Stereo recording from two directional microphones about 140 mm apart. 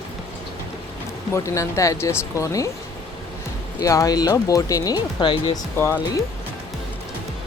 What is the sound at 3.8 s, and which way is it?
Speech, 25° left (ahead or behind).